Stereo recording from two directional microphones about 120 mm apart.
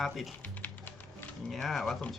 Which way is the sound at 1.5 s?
Centre (ahead or behind).